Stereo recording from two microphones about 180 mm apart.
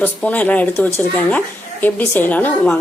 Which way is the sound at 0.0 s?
10° left (ahead or behind).